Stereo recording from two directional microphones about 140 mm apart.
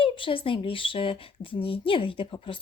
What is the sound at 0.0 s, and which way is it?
Speech, 40° left (ahead or behind).